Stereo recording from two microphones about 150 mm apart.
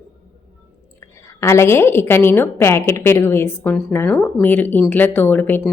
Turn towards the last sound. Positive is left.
turn(degrees=15)  # may be behind; listen again after turning